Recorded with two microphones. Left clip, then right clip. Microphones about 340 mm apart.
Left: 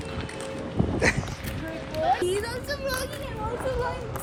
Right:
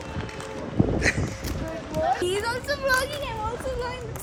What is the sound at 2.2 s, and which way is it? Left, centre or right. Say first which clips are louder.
Speech: right 2 dB; centre.